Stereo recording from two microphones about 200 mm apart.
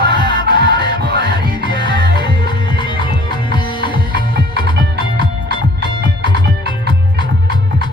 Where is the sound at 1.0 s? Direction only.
55° right (ahead or behind).